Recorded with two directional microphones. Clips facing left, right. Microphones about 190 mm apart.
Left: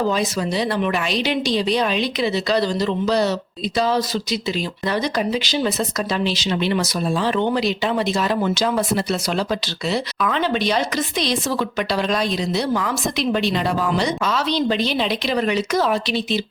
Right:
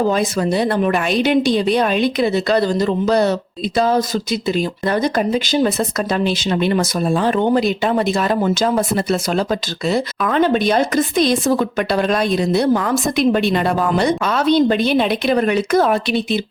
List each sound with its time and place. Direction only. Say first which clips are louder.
0.1 s speech: right 4 dB; 50° right (ahead or behind)